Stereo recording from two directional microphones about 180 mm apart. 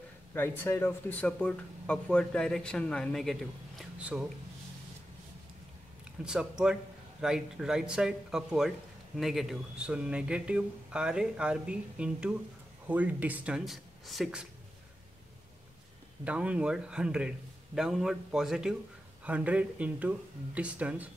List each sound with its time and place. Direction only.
0.3 s speech: 15° left (ahead or behind); by 4.3 s 5° right (ahead or behind)
6.2 s speech: 5° right (ahead or behind)
16.3 s speech: 5° right (ahead or behind)